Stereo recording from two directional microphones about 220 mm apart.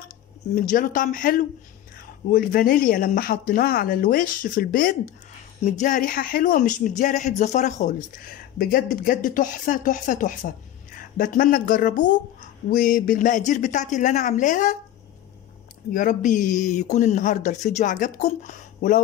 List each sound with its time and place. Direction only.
0.6 s a woman's voice: 40° left (ahead or behind)
15.9 s a woman's voice: 35° left (ahead or behind)